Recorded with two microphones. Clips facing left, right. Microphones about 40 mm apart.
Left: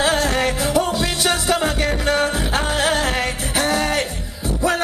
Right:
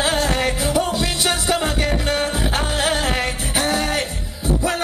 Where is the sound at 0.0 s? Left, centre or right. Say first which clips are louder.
Left 1 dB; centre.